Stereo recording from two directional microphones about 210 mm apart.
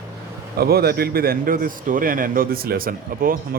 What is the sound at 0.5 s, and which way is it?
A man's voice, 50° right (ahead or behind).